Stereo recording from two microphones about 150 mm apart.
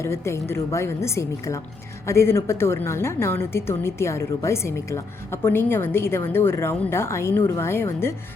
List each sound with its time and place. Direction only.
0.0 s a woman's voice: 15° left (ahead or behind)